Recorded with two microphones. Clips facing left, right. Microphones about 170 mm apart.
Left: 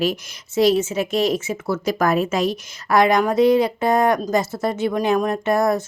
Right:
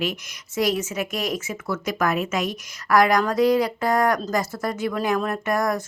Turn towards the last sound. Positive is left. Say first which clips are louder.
# left 5 dB
turn(degrees=25)  # may be behind; listen again after turning